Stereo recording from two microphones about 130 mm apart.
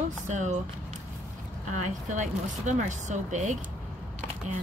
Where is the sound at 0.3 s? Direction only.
65° right (ahead or behind).